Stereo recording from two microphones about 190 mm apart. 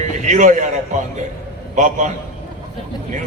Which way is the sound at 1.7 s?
40° right (ahead or behind).